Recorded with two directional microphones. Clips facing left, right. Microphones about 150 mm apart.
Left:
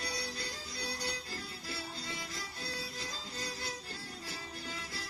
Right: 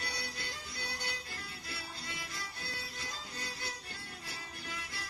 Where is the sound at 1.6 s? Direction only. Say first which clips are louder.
Left 3 dB; 30° left (ahead or behind).